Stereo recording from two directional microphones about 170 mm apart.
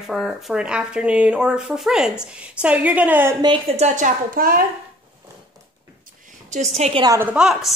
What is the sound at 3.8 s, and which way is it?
Speech, 45° right (ahead or behind).